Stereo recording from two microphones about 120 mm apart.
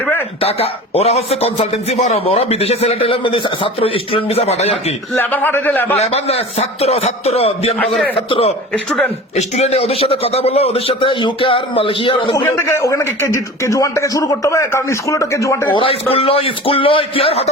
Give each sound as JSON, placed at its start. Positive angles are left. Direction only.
{"t": 0.3, "sound": "a man's voice", "side_deg": 55}
{"t": 5.1, "sound": "a man's voice", "side_deg": 15}
{"t": 6.0, "sound": "a man's voice", "side_deg": 60}
{"t": 8.7, "sound": "a man's voice", "side_deg": 10}
{"t": 9.3, "sound": "a man's voice", "side_deg": 65}
{"t": 12.5, "sound": "a man's voice", "side_deg": 20}
{"t": 15.7, "sound": "a man's voice", "side_deg": 50}